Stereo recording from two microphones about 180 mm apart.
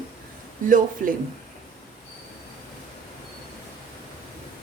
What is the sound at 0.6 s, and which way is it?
Speech, 50° right (ahead or behind).